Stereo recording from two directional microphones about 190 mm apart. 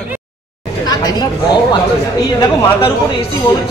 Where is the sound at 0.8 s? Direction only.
20° left (ahead or behind).